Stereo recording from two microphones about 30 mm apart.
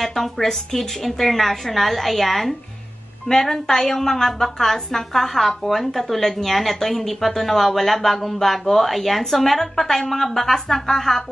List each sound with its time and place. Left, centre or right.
0.0 s a woman's voice: centre
3.3 s a woman's voice: left